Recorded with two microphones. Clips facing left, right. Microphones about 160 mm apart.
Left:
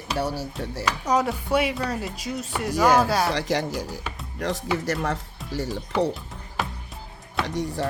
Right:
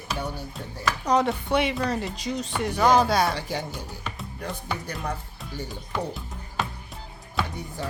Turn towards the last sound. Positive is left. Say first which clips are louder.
# left 7 dB
turn(degrees=90)